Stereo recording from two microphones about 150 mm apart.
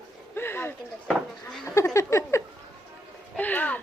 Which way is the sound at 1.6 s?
20° left (ahead or behind).